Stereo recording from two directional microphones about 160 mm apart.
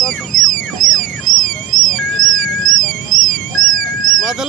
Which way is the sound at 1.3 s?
55° right (ahead or behind).